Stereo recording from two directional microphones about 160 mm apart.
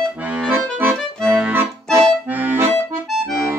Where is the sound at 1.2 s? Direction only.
Centre (ahead or behind).